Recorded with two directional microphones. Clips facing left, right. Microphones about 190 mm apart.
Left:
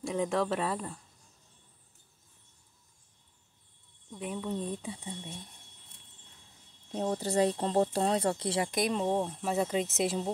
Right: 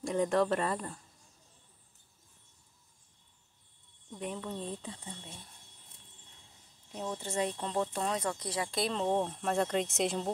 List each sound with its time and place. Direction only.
0.0 s speech: centre (ahead or behind)
4.1 s speech: 5° left (ahead or behind)
6.9 s speech: 35° left (ahead or behind); by 10.3 s 5° left (ahead or behind)